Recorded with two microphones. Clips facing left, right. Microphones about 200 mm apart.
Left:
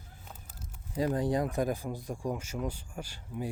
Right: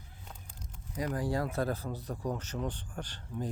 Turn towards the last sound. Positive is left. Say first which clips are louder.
# left 1 dB
turn(degrees=10)  # may be behind; listen again after turning